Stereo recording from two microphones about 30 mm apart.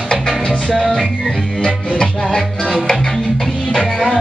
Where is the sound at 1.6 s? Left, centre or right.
Left.